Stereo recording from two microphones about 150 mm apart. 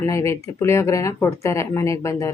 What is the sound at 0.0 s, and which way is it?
A woman's voice, 20° left (ahead or behind).